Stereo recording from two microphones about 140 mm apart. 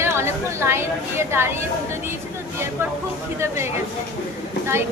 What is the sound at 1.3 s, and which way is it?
Speech, 15° right (ahead or behind).